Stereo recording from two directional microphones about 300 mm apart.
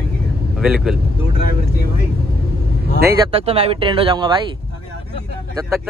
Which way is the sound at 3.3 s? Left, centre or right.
Centre.